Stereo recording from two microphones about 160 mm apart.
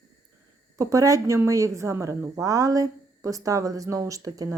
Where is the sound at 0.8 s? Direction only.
20° right (ahead or behind).